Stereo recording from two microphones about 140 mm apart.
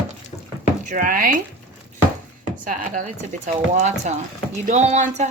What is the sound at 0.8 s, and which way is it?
Speech, 75° right (ahead or behind).